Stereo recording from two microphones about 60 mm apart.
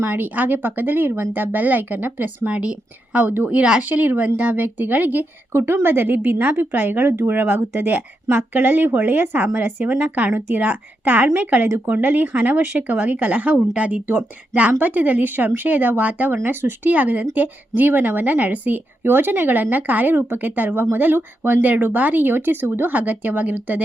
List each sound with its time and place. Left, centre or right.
0.0 s speech: right
2.5 s speech: right
3.8 s speech: right
5.5 s speech: right
7.1 s speech: right
7.3 s speech: right